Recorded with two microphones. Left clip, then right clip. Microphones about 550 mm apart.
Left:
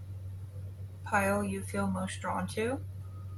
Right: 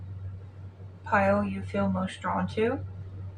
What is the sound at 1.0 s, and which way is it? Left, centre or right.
Speech, left.